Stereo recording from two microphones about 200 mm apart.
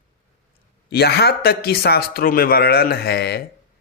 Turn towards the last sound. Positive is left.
turn(degrees=55)  # may be behind; listen again after turning